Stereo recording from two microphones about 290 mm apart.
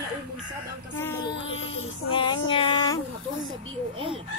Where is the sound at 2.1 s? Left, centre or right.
Centre.